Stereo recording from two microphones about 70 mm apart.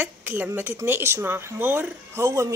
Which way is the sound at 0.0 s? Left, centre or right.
Right.